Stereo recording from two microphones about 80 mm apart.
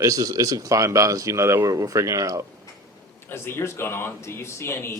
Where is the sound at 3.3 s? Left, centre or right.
Left.